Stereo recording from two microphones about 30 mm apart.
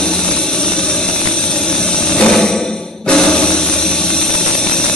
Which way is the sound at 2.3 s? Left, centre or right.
Centre.